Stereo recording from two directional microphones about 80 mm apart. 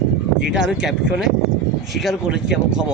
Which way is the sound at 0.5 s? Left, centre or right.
Centre.